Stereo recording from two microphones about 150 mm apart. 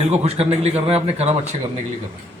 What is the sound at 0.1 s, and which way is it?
Speech, 45° right (ahead or behind).